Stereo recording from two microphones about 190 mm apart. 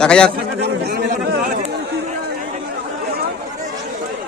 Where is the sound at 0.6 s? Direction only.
55° right (ahead or behind).